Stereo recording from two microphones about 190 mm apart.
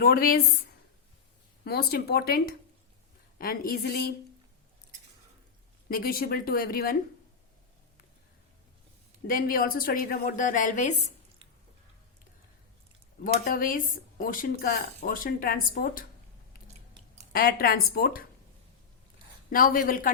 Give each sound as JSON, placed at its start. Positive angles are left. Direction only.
{"t": 0.0, "sound": "speech", "side_deg": 50}
{"t": 5.9, "sound": "speech", "side_deg": 50}
{"t": 9.2, "sound": "speech", "side_deg": 50}
{"t": 13.2, "sound": "speech", "side_deg": 50}
{"t": 17.3, "sound": "speech", "side_deg": 55}
{"t": 19.5, "sound": "speech", "side_deg": 50}